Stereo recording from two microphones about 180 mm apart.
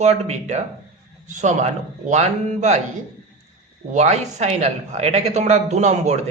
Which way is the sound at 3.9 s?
40° right (ahead or behind).